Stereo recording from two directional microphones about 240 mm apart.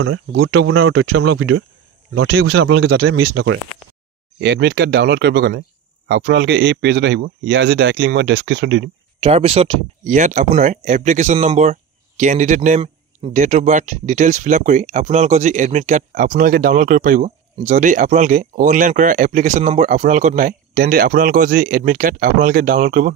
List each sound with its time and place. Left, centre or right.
0.0 s speech: right
2.1 s speech: right
3.2 s speech: right
9.2 s speech: right